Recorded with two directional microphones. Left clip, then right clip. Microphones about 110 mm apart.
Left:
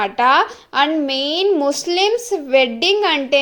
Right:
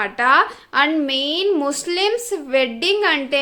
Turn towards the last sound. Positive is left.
turn(degrees=25)  # may be behind; listen again after turning